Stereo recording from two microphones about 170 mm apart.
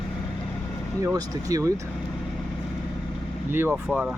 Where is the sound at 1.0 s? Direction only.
20° right (ahead or behind).